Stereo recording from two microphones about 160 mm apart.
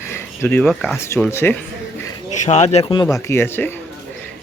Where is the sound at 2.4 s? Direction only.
45° left (ahead or behind); by 3.7 s 15° left (ahead or behind).